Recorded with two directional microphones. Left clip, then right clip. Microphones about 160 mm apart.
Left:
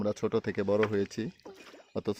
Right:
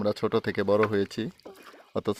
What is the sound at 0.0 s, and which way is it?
Speech, 10° right (ahead or behind).